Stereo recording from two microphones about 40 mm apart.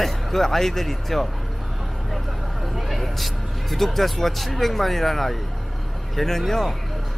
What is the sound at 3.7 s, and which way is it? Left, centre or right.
Speech, centre.